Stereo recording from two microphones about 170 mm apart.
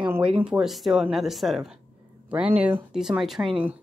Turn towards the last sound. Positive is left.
turn(degrees=-5)  # may be behind; listen again after turning